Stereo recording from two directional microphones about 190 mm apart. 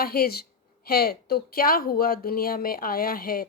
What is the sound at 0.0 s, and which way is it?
Speech, 50° left (ahead or behind).